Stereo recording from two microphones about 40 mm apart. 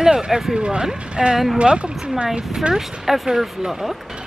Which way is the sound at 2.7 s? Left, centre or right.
Centre.